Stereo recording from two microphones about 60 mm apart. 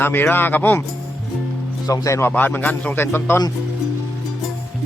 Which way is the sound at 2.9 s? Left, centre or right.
Left.